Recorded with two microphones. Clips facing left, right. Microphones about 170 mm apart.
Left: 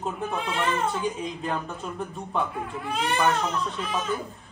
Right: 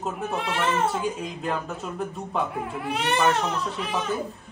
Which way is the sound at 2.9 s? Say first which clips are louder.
Right 1 dB; 75° right (ahead or behind).